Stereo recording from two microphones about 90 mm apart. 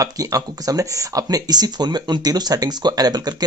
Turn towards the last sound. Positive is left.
turn(degrees=-50)  # may be behind; listen again after turning